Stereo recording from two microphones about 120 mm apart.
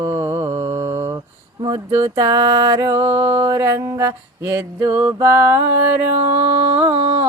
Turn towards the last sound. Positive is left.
turn(degrees=-15)  # may be behind; listen again after turning